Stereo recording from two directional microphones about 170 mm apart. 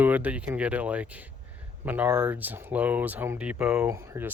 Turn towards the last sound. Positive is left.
turn(degrees=-15)  # may be behind; listen again after turning